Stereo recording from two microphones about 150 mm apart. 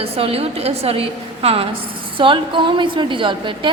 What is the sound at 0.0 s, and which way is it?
A woman's voice, 40° right (ahead or behind).